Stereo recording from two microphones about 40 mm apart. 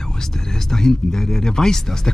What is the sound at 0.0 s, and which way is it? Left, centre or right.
Speech, centre.